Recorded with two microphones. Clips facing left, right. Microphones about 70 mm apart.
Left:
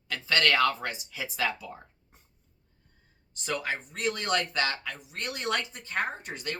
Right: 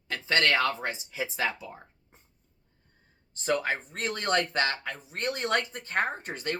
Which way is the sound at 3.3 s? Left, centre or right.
Right.